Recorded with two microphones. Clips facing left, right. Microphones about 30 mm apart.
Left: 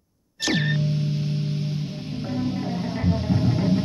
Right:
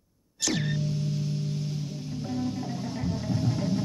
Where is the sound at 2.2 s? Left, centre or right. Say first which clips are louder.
Left 5 dB; left.